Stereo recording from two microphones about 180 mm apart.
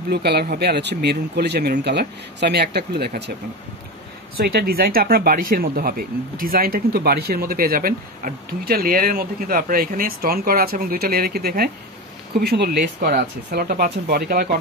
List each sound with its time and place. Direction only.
0.1 s speech: 65° right (ahead or behind)
4.4 s speech: 60° right (ahead or behind)